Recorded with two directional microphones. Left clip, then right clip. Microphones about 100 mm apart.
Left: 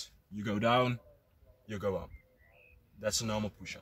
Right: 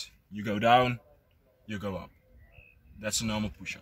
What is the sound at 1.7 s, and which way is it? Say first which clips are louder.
Speech: left 2 dB; 25° left (ahead or behind).